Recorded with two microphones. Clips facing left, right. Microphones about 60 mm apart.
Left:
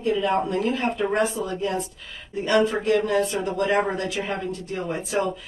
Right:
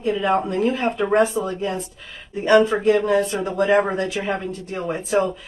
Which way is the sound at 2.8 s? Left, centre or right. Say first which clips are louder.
Right 4 dB; right.